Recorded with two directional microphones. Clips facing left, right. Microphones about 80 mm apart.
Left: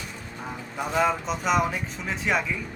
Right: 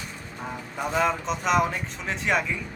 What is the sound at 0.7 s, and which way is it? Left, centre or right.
Speech, centre.